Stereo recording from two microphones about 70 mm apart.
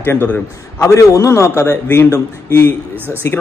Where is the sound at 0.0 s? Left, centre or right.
Left.